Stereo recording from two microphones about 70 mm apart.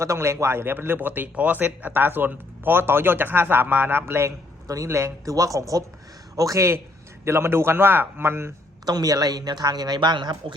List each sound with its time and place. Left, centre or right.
0.0 s speech: right
4.9 s speech: right
8.9 s a woman's voice: right